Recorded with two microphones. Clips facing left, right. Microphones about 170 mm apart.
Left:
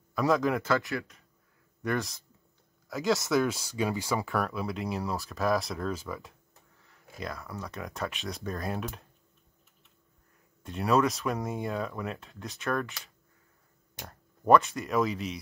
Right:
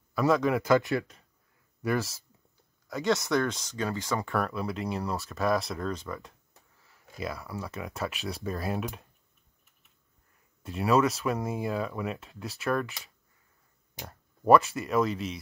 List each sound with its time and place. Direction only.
0.1 s a man's voice: centre (ahead or behind)
0.6 s speech: 15° right (ahead or behind)
1.8 s speech: 5° right (ahead or behind); by 4.2 s 10° left (ahead or behind)
4.2 s speech: centre (ahead or behind)
10.6 s speech: centre (ahead or behind)
14.0 s speech: 5° right (ahead or behind)